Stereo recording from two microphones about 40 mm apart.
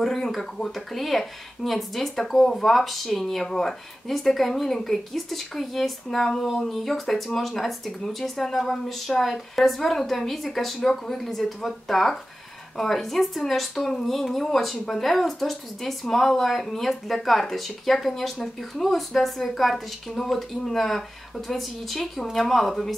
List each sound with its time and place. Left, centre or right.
0.0 s speech: centre